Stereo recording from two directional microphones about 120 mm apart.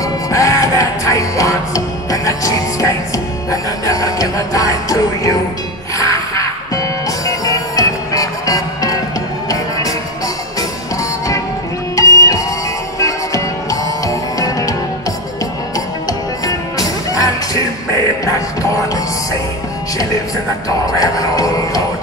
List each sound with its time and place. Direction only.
0.0 s music: 25° left (ahead or behind)
11.9 s music: 25° left (ahead or behind)
16.1 s music: 30° left (ahead or behind)
20.8 s music: 30° left (ahead or behind)